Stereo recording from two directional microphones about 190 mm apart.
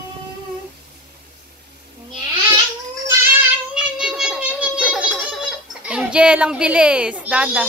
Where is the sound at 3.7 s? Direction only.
5° right (ahead or behind).